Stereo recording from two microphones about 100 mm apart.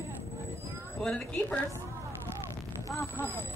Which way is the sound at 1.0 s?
10° left (ahead or behind).